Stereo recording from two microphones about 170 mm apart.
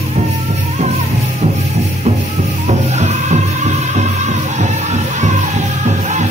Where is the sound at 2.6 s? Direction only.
40° right (ahead or behind).